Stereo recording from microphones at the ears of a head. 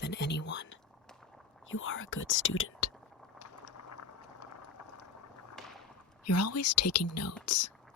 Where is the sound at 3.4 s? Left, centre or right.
Left.